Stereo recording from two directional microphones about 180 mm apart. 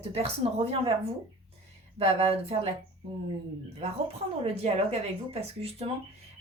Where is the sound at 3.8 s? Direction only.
35° right (ahead or behind).